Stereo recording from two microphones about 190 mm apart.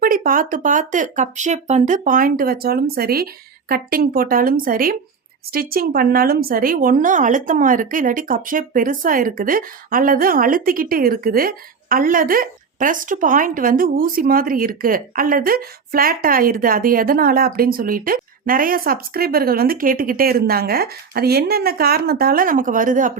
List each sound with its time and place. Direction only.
0.0 s speech: 50° right (ahead or behind)